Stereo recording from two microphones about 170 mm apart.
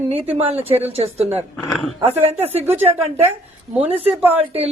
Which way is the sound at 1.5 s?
Centre (ahead or behind).